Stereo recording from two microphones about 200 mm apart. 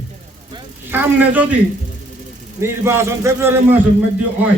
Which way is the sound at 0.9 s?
10° right (ahead or behind).